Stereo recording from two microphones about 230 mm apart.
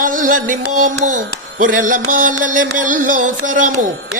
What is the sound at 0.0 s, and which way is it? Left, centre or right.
Music, right.